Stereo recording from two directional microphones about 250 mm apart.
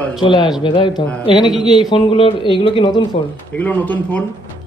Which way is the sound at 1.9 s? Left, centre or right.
Left.